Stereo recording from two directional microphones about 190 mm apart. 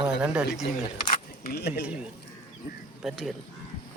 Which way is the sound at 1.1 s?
50° left (ahead or behind).